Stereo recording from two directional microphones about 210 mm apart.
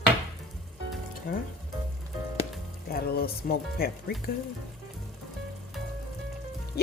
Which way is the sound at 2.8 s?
45° left (ahead or behind).